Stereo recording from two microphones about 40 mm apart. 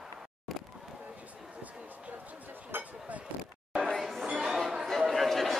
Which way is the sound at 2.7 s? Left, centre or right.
Right.